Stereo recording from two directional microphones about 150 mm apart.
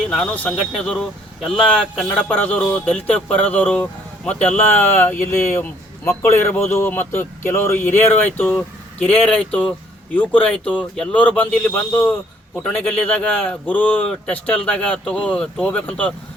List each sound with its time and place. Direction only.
0.1 s speech: 10° left (ahead or behind)